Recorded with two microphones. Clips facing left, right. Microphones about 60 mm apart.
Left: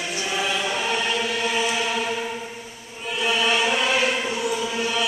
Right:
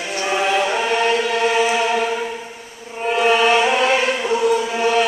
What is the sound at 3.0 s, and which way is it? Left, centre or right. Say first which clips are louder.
Music: right 8 dB; right.